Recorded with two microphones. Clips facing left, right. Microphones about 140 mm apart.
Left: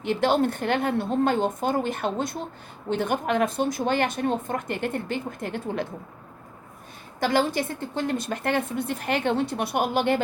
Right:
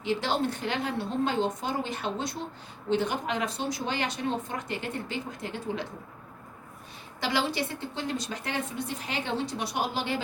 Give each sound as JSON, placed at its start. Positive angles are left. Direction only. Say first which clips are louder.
{"t": 0.0, "sound": "speech", "louder": "left 6 dB", "side_deg": 55}
{"t": 7.2, "sound": "speech", "louder": "left 6 dB", "side_deg": 50}